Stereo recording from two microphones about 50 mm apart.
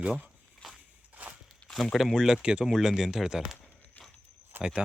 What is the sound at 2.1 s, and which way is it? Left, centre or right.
Speech, centre.